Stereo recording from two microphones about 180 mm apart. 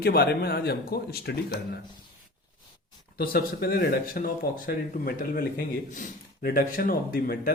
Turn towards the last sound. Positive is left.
turn(degrees=55)  # may be behind; listen again after turning